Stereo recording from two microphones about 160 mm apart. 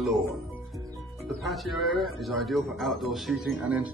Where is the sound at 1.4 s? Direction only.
Centre (ahead or behind).